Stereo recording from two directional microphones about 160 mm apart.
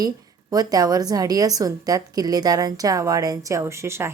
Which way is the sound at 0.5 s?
25° right (ahead or behind).